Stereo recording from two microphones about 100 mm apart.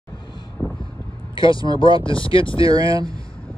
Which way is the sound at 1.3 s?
55° left (ahead or behind).